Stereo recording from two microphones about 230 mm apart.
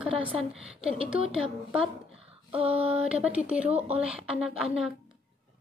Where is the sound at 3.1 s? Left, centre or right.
Centre.